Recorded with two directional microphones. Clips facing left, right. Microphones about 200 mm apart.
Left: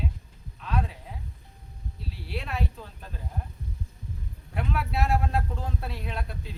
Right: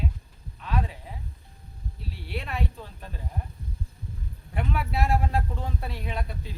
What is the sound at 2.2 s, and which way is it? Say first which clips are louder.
Speech: even; centre (ahead or behind).